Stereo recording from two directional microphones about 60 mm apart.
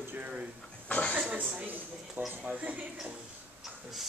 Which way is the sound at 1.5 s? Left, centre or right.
Right.